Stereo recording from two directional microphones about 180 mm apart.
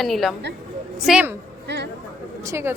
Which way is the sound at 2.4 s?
15° right (ahead or behind).